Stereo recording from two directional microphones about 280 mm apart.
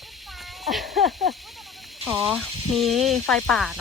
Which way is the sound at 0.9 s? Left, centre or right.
Right.